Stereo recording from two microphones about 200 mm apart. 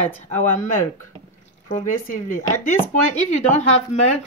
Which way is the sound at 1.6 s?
40° left (ahead or behind).